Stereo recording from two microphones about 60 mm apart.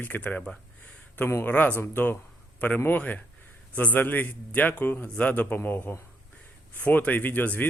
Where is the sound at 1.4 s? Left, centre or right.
Left.